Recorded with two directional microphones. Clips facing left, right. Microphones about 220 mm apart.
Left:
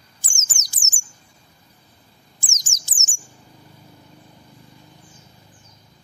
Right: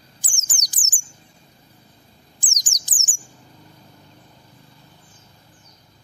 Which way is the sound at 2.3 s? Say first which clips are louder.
Left 3 dB; 15° right (ahead or behind).